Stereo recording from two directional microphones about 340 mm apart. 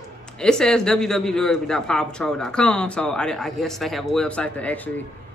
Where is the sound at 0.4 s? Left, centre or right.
Centre.